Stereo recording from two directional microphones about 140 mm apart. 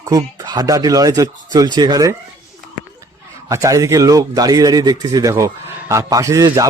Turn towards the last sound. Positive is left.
turn(degrees=-25)  # may be behind; listen again after turning